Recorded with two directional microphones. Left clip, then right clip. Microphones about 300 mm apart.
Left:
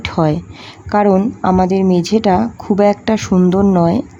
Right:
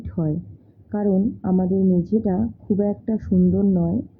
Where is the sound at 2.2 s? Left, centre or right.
Left.